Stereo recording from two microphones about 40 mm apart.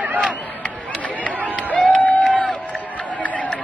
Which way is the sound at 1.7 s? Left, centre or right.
Left.